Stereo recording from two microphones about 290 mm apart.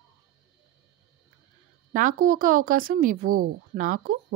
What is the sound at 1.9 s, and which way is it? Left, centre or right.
Speech, right.